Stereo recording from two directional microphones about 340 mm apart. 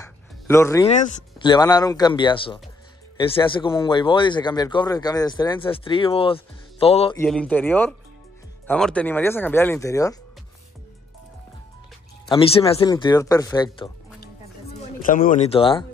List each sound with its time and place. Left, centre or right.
0.0 s a sound: centre
0.9 s speech: centre
7.2 s speech: centre
12.3 s speech: centre
15.0 s speech: left